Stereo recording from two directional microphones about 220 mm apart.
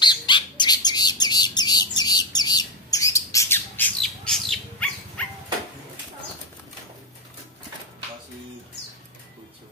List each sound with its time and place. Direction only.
0.0 s bird: 20° left (ahead or behind); by 5.2 s 5° left (ahead or behind)